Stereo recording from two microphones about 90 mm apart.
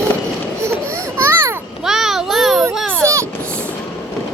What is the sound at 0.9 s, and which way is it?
Babbling, 30° right (ahead or behind).